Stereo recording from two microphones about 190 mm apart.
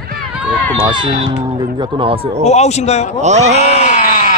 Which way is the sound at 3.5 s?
35° left (ahead or behind).